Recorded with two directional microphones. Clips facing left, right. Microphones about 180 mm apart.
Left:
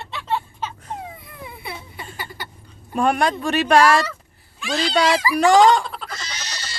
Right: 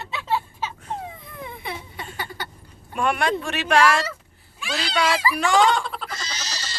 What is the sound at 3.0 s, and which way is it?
Speech, 35° left (ahead or behind).